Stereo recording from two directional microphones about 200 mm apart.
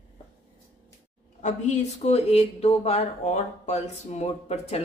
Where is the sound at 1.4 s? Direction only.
35° left (ahead or behind).